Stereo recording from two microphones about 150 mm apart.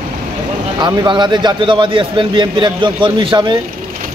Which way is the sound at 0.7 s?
30° right (ahead or behind).